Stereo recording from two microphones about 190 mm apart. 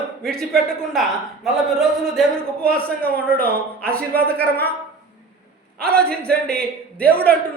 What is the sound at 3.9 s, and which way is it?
Speech, 55° right (ahead or behind).